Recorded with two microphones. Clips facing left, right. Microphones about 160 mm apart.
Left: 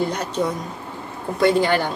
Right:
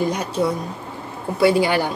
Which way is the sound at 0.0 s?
10° right (ahead or behind).